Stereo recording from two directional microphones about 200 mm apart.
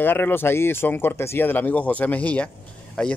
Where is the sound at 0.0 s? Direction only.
10° left (ahead or behind).